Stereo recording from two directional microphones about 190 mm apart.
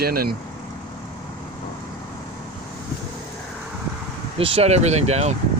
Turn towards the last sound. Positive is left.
turn(degrees=-35)  # may be behind; listen again after turning